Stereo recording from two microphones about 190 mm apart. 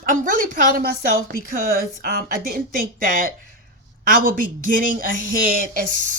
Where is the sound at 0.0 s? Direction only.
45° right (ahead or behind).